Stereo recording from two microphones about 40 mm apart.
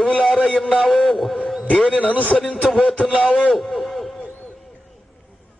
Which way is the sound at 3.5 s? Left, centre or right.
Centre.